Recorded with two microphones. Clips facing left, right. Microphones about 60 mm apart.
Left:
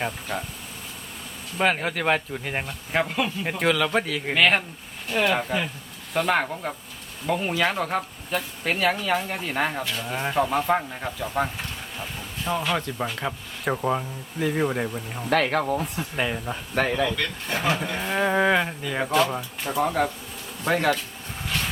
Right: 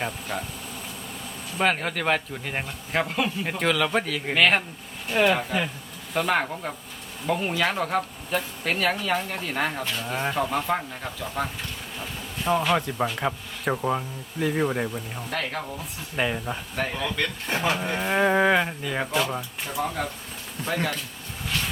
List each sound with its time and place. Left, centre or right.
0.0 s speech: centre
1.5 s speech: centre
12.5 s speech: centre
13.7 s speech: centre
15.3 s speech: left
16.1 s speech: centre
16.8 s speech: left
17.5 s speech: right; by 19.5 s centre
19.6 s speech: left
20.7 s speech: left